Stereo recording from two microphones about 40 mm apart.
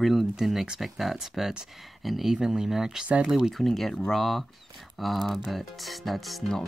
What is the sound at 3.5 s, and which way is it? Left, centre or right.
Speech, centre.